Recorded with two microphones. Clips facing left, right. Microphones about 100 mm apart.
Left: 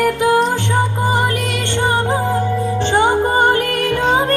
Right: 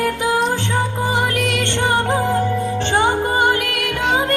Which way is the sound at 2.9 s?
30° left (ahead or behind).